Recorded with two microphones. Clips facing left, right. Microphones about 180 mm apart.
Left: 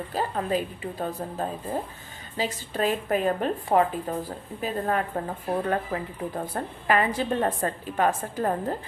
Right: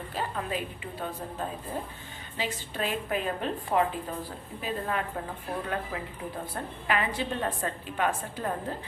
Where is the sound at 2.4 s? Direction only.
40° left (ahead or behind).